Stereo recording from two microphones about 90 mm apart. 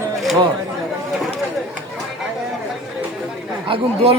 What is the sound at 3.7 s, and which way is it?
Speech, 90° right.